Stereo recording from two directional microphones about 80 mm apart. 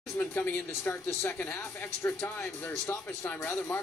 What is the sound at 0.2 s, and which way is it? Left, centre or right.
Speech, left.